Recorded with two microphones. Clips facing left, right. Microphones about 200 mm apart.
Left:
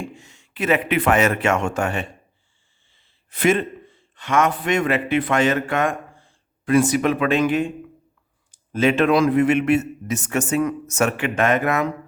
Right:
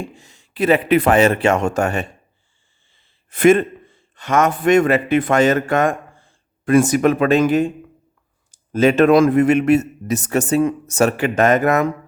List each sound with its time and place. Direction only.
0.0 s speech: 35° right (ahead or behind)
3.2 s a man's voice: 50° right (ahead or behind)